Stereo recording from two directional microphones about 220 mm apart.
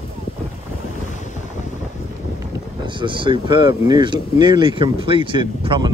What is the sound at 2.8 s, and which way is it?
Speech, 20° right (ahead or behind).